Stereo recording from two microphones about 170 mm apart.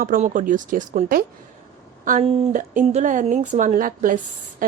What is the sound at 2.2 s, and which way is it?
Speech, 35° right (ahead or behind).